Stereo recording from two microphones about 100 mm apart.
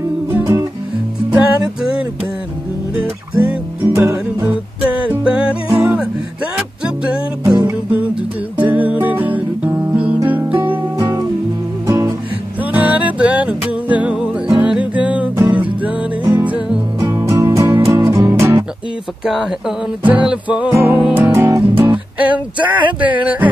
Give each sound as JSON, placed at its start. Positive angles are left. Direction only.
{"t": 1.3, "sound": "music", "side_deg": -10}
{"t": 4.5, "sound": "music", "side_deg": -10}
{"t": 8.5, "sound": "music", "side_deg": -15}
{"t": 11.0, "sound": "music", "side_deg": -35}
{"t": 12.7, "sound": "music", "side_deg": -15}
{"t": 17.1, "sound": "music", "side_deg": -30}
{"t": 19.2, "sound": "a sound", "side_deg": -5}
{"t": 20.2, "sound": "music", "side_deg": -15}
{"t": 20.7, "sound": "music", "side_deg": -25}
{"t": 22.6, "sound": "a sound", "side_deg": -50}